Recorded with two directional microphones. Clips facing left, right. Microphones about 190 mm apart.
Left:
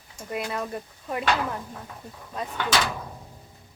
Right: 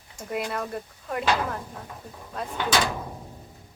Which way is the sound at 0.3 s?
Centre (ahead or behind).